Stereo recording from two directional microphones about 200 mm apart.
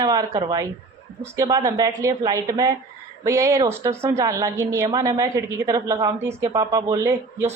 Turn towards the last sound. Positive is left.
turn(degrees=-15)  # may be behind; listen again after turning